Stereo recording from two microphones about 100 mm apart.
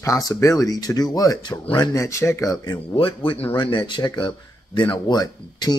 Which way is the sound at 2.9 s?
60° left (ahead or behind).